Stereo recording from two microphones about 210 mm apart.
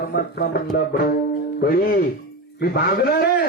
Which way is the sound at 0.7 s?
50° left (ahead or behind).